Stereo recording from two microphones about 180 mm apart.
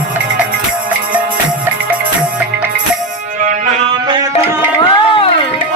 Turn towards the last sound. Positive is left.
turn(degrees=30)  # may be behind; listen again after turning